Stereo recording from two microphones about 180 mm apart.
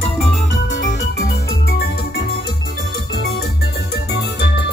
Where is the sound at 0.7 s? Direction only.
50° left (ahead or behind).